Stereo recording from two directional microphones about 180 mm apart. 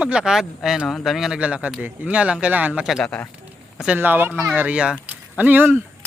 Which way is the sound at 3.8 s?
10° right (ahead or behind).